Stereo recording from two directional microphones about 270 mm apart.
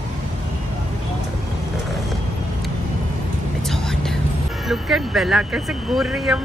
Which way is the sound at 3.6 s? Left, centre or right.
Centre.